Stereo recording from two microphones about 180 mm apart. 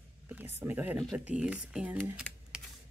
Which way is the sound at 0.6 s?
10° right (ahead or behind).